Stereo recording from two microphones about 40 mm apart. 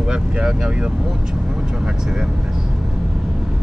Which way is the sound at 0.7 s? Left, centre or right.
Right.